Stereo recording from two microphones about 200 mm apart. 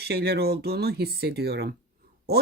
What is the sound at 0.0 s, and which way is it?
Speech, 55° right (ahead or behind).